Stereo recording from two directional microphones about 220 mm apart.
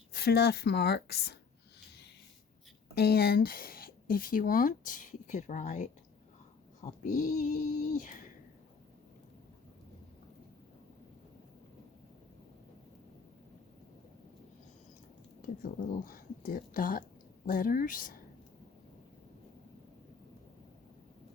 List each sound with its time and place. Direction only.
0.1 s speech: 45° left (ahead or behind)
2.9 s speech: 45° left (ahead or behind)
7.6 s a sound: 35° left (ahead or behind)
15.4 s speech: 40° left (ahead or behind)